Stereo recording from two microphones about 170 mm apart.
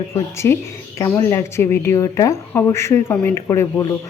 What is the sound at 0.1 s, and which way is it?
Speech, 15° left (ahead or behind).